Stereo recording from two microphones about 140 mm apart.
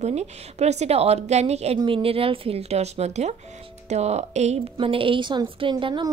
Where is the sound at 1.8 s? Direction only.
40° right (ahead or behind).